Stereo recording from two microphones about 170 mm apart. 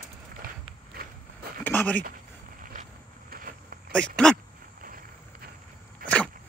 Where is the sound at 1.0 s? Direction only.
65° right (ahead or behind).